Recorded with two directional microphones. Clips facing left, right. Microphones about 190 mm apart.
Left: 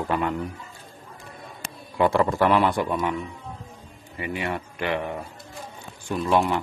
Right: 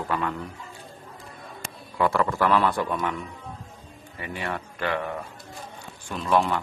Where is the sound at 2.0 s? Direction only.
20° left (ahead or behind).